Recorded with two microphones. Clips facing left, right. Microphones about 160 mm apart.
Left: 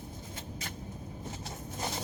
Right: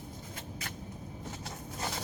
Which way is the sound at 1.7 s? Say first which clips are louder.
Left 1 dB; 25° left (ahead or behind).